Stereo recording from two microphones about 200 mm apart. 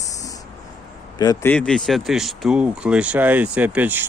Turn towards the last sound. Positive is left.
turn(degrees=-10)  # may be behind; listen again after turning